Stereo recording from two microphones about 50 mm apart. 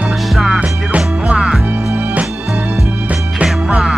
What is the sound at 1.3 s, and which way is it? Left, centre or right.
Music, centre.